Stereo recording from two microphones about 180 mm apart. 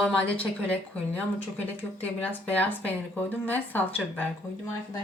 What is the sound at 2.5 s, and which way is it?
Speech, 10° left (ahead or behind).